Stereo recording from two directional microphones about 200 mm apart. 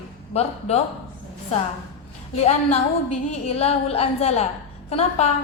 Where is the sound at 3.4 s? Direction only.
30° left (ahead or behind).